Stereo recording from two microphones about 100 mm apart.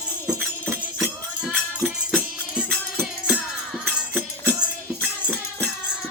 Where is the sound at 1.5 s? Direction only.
20° right (ahead or behind).